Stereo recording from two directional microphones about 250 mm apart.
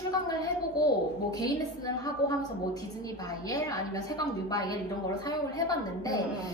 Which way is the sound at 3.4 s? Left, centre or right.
Centre.